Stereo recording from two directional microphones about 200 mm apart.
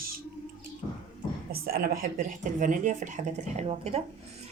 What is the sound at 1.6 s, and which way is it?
A woman's voice, 50° right (ahead or behind).